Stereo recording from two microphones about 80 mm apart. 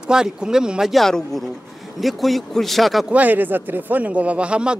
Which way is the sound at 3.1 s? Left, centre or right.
Right.